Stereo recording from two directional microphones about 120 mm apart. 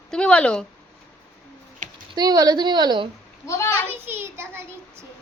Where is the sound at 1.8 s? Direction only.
90° right.